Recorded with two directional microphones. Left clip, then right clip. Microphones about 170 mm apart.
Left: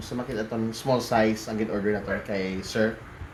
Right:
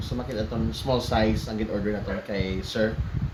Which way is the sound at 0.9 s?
15° right (ahead or behind).